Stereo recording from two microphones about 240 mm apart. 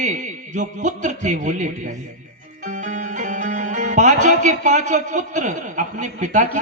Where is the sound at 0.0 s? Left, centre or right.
Right.